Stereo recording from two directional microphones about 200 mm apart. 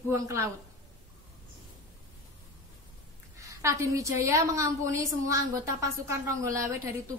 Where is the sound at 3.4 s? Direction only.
15° right (ahead or behind).